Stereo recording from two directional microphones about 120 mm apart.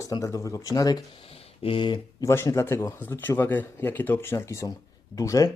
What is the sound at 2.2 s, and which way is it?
Speech, 25° left (ahead or behind).